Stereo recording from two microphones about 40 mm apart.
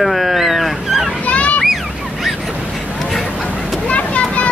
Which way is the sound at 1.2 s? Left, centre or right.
Left.